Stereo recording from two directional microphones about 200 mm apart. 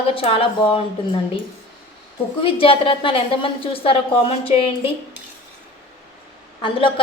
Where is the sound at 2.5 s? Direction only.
25° left (ahead or behind).